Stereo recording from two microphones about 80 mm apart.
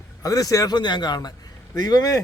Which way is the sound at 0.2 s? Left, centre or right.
Left.